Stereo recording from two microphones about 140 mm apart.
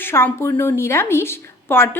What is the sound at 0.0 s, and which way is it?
A woman's voice, 15° left (ahead or behind).